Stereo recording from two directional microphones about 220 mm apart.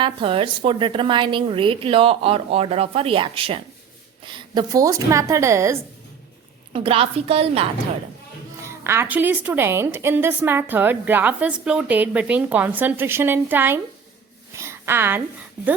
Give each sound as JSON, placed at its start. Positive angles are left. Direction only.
{"t": 0.0, "sound": "a woman's voice", "side_deg": -25}
{"t": 6.7, "sound": "a woman's voice", "side_deg": -25}
{"t": 8.6, "sound": "a woman's voice", "side_deg": -10}
{"t": 14.5, "sound": "a sound", "side_deg": -10}